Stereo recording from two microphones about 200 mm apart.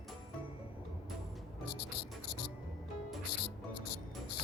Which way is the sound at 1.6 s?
55° left (ahead or behind).